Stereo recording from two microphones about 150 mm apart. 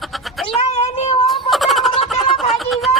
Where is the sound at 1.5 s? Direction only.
Centre (ahead or behind).